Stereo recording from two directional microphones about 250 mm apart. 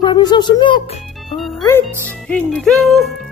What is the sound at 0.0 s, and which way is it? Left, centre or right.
Speech, centre.